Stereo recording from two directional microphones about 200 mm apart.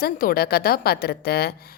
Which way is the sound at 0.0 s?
45° left (ahead or behind).